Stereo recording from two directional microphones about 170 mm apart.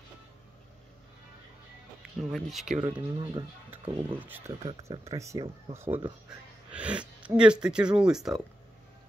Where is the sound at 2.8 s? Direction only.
25° right (ahead or behind).